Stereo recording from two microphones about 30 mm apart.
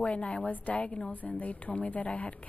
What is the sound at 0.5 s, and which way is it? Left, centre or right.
Speech, left.